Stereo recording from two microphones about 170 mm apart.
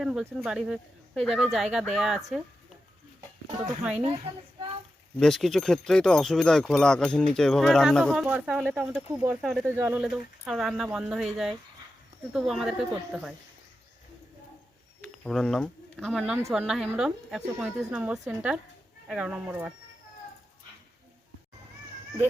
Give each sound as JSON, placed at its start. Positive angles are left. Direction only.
{"t": 0.0, "sound": "speech", "side_deg": -5}
{"t": 3.9, "sound": "speech", "side_deg": -35}
{"t": 5.2, "sound": "speech", "side_deg": 0}
{"t": 9.6, "sound": "speech", "side_deg": -15}
{"t": 15.2, "sound": "speech", "side_deg": 5}